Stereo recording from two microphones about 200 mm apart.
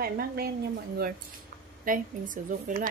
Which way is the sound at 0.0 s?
50° right (ahead or behind).